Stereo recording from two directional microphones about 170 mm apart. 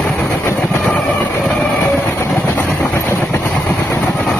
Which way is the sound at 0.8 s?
Centre (ahead or behind).